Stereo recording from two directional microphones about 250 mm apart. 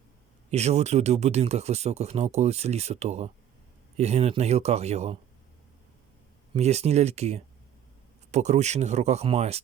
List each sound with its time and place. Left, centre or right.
0.5 s speech: right
6.5 s speech: right